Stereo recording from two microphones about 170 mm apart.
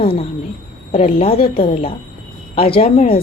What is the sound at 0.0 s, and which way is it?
A woman's voice, 35° left (ahead or behind).